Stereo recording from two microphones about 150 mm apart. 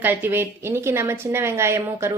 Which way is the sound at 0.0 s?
15° right (ahead or behind).